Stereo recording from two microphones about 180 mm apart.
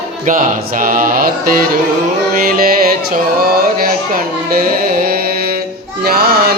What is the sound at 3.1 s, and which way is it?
Speech, 55° right (ahead or behind).